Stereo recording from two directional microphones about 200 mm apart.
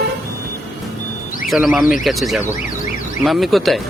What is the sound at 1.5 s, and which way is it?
A man's voice, 5° right (ahead or behind).